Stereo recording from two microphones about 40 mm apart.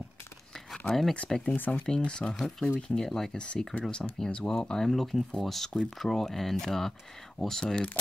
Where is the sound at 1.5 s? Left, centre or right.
Left.